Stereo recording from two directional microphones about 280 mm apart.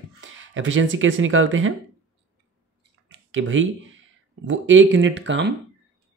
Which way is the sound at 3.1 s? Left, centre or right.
Right.